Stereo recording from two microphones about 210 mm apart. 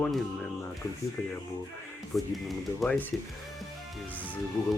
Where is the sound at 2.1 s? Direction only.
Centre (ahead or behind).